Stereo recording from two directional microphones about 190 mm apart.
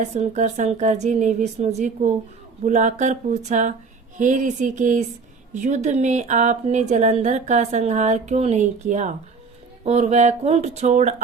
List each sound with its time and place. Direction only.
0.0 s a woman's voice: 40° right (ahead or behind)